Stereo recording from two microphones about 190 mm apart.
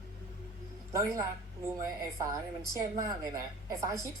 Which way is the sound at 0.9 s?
15° right (ahead or behind).